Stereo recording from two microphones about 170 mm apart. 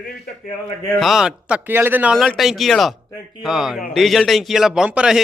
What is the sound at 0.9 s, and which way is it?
A man's voice, centre (ahead or behind).